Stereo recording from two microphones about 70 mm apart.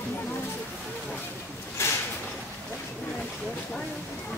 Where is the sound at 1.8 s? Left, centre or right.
Left.